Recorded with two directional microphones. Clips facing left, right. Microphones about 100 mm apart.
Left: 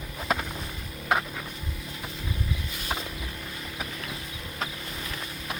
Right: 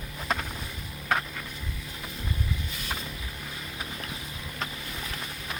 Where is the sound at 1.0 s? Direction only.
10° left (ahead or behind).